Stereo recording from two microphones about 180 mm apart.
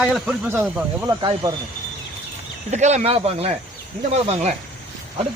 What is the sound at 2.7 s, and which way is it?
Speech, 40° right (ahead or behind).